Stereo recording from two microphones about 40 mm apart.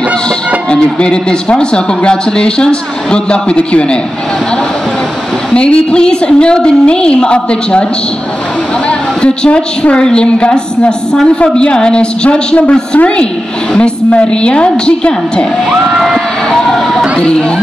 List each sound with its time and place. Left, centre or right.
0.7 s speech: left
5.5 s speech: left
8.8 s a woman's voice: left
16.4 s vehicle: centre